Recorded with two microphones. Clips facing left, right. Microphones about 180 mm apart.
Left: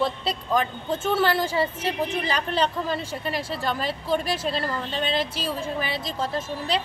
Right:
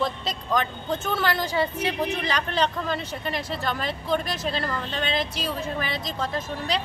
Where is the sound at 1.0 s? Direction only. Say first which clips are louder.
Left 5 dB; 30° left (ahead or behind).